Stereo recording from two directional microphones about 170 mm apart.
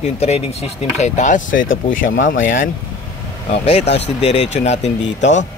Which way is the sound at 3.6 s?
40° left (ahead or behind).